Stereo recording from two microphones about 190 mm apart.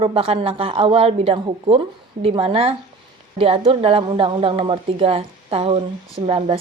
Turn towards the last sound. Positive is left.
turn(degrees=-30)  # may be behind; listen again after turning